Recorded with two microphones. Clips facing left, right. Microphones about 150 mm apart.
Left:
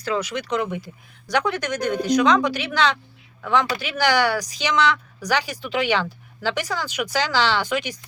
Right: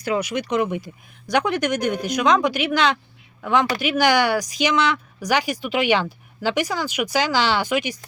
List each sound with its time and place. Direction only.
0.0 s speech: 15° right (ahead or behind)